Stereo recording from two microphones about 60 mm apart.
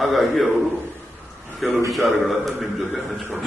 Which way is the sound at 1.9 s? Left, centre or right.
Centre.